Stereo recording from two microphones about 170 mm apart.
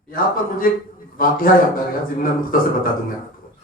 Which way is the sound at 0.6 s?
55° left (ahead or behind).